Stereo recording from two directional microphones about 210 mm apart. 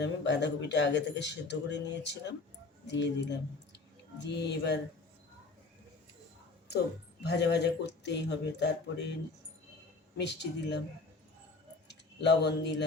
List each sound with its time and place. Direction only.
0.0 s speech: 55° left (ahead or behind)
7.3 s speech: 55° left (ahead or behind)
10.2 s speech: 55° left (ahead or behind)
11.9 s speech: 55° left (ahead or behind)